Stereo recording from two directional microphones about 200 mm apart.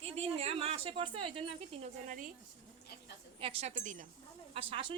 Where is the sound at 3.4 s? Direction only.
30° right (ahead or behind).